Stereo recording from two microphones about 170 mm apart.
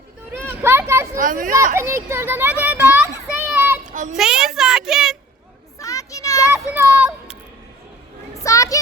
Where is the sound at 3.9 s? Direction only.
50° right (ahead or behind).